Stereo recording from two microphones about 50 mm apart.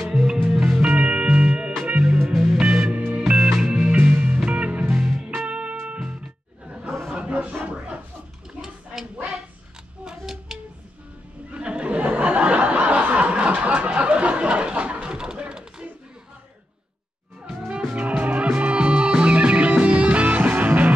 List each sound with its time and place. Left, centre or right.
0.1 s music: centre
0.8 s music: right
3.4 s music: centre
4.1 s music: right
4.9 s music: centre
5.4 s music: right
6.6 s a sound: right
10.0 s a sound: centre
11.5 s a sound: right
17.6 s music: centre
17.9 s music: right